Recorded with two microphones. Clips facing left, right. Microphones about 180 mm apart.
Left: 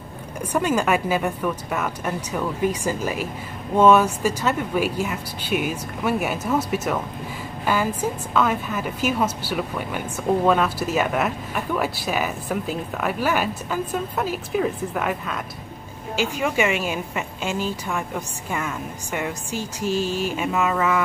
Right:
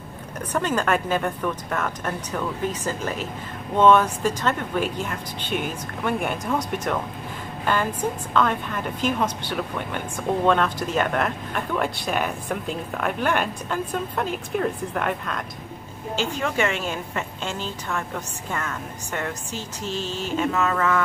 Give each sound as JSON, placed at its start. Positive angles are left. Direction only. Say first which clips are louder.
{"t": 0.5, "sound": "a woman's voice", "louder": "left 2 dB", "side_deg": 10}